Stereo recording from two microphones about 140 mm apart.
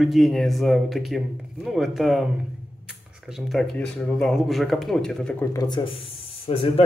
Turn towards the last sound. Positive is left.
turn(degrees=45)  # may be behind; listen again after turning